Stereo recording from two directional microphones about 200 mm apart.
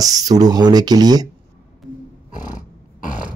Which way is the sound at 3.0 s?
40° left (ahead or behind).